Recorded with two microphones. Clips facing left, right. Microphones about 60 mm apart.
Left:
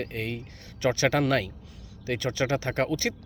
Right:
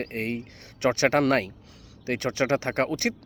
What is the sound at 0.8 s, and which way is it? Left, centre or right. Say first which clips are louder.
Speech: right 2 dB; right.